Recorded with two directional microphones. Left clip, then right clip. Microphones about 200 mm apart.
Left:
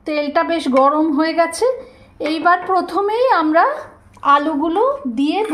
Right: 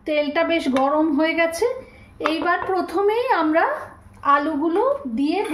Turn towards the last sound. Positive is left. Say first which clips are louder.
# left 3 dB
turn(degrees=35)  # may be behind; listen again after turning